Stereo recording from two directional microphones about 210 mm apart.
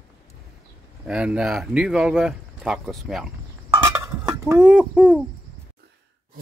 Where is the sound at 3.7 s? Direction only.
15° right (ahead or behind).